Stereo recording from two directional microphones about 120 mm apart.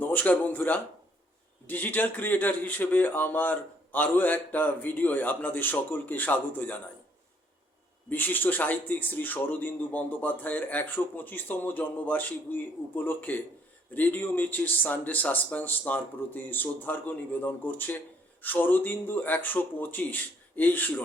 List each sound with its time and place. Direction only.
0.0 s a man's voice: 15° left (ahead or behind)
8.1 s a man's voice: 15° left (ahead or behind)